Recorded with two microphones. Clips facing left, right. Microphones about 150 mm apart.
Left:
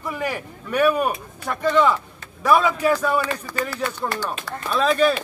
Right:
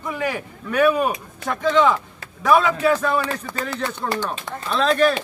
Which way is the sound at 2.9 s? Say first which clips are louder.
Even; 10° left (ahead or behind).